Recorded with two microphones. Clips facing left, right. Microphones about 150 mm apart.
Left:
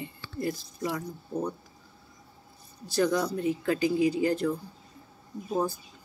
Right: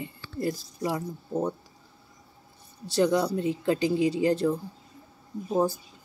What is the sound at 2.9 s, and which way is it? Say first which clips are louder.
Speech: right 3 dB; 30° right (ahead or behind).